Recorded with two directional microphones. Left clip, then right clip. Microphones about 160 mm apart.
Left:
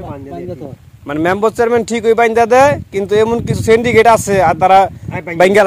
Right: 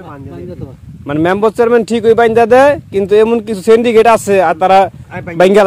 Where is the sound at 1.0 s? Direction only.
70° right (ahead or behind).